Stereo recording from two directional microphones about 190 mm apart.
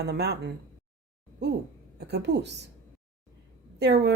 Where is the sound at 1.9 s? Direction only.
60° right (ahead or behind).